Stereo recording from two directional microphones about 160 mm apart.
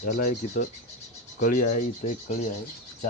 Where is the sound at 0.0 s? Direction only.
60° left (ahead or behind).